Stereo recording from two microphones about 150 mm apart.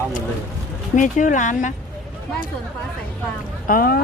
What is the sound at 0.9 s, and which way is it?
Speech, 60° left (ahead or behind).